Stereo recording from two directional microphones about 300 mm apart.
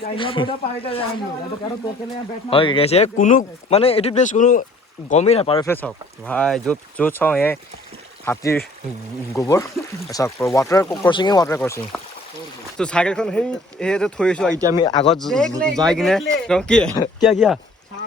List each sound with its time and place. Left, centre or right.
0.2 s speech: centre
2.5 s speech: centre
5.6 s speech: centre
14.8 s speech: centre
15.1 s speech: centre